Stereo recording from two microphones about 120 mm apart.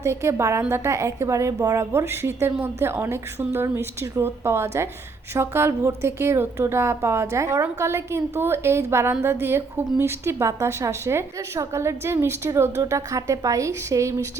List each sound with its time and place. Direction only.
0.0 s a woman's voice: 25° right (ahead or behind)